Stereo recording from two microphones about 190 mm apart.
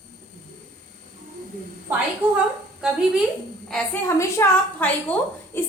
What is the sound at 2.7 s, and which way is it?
Speech, 5° right (ahead or behind).